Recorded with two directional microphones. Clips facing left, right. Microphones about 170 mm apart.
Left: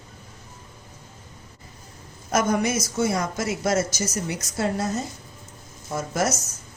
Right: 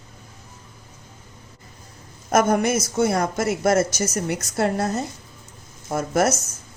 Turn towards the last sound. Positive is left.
turn(degrees=-55)  # may be behind; listen again after turning